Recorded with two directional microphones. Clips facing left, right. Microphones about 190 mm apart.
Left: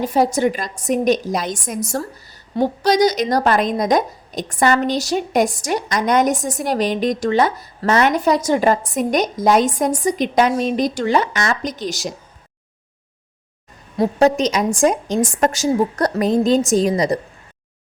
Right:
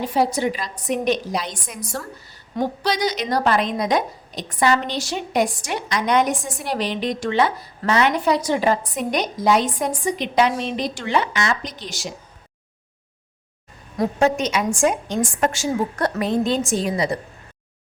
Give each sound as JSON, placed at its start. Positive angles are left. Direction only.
{"t": 0.0, "sound": "a woman's voice", "side_deg": 45}
{"t": 13.9, "sound": "a woman's voice", "side_deg": 30}